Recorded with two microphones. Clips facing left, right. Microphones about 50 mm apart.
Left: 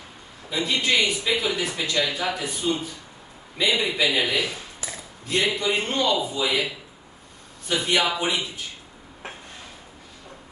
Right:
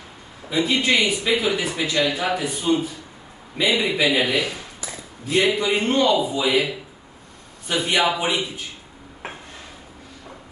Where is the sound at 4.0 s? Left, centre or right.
Centre.